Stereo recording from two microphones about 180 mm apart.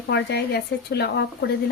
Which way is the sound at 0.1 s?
65° left (ahead or behind).